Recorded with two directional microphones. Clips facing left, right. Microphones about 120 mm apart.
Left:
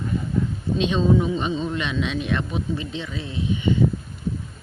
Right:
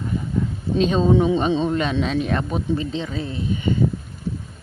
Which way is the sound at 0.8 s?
40° right (ahead or behind).